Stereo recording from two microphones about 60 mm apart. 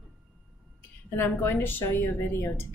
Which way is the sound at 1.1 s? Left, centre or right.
Left.